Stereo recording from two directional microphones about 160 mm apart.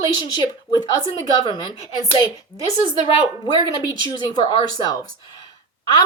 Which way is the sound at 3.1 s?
25° left (ahead or behind).